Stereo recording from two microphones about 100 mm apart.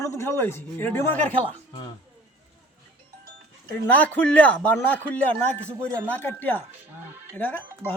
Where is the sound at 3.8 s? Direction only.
15° left (ahead or behind).